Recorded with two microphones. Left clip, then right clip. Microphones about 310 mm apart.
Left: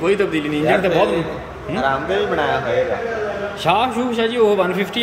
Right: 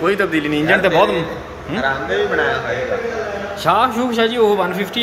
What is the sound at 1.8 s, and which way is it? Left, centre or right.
Speech, left.